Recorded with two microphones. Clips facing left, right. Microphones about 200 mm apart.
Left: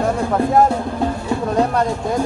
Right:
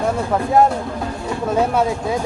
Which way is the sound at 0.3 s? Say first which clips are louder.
Even; centre (ahead or behind).